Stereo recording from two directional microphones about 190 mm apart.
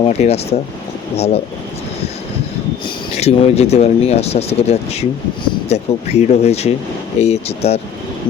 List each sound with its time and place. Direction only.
0.0 s speech: 35° left (ahead or behind)
2.8 s speech: 35° left (ahead or behind)